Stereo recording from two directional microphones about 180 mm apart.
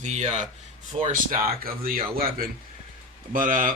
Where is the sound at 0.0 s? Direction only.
40° right (ahead or behind).